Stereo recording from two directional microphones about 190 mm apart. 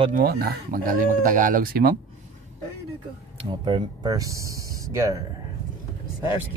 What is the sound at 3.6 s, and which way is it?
Speech, 25° right (ahead or behind).